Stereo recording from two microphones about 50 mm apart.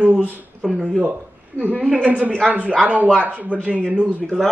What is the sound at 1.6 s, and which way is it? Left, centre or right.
Speech, left.